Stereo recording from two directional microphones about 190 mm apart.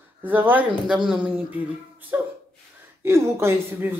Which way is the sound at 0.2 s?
10° right (ahead or behind).